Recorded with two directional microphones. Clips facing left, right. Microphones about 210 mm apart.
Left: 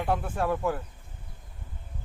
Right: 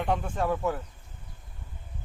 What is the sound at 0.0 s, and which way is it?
Speech, 5° left (ahead or behind).